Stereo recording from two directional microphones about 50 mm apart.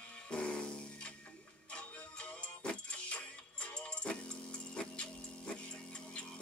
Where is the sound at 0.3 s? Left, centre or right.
Centre.